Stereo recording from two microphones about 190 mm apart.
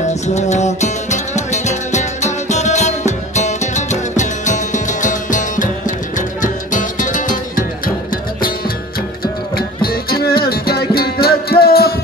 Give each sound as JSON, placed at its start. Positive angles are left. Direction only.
{"t": 0.1, "sound": "music", "side_deg": 35}